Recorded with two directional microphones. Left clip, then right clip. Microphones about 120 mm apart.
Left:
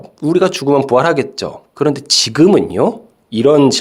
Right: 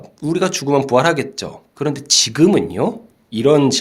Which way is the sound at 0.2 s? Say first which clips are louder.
Left 5 dB; 30° left (ahead or behind).